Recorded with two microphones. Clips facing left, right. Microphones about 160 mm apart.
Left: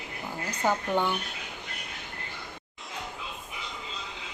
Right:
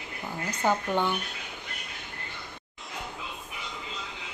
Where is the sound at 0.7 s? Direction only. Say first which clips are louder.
Even; 10° left (ahead or behind).